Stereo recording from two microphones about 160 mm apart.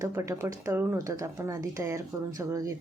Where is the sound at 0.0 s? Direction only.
15° right (ahead or behind).